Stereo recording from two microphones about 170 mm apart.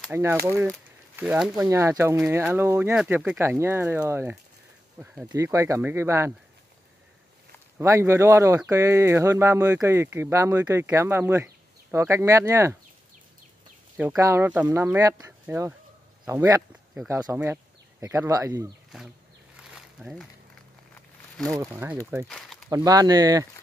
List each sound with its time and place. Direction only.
0.1 s speech: 15° right (ahead or behind)
5.3 s speech: 20° right (ahead or behind)
7.8 s speech: 15° right (ahead or behind)
13.9 s speech: 15° right (ahead or behind)
19.5 s a sound: 5° right (ahead or behind)
21.5 s speech: 15° right (ahead or behind)
22.3 s a sound: centre (ahead or behind)
22.7 s speech: 20° right (ahead or behind)